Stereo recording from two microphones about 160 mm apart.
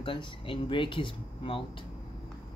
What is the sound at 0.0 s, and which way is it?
Speech, 30° left (ahead or behind).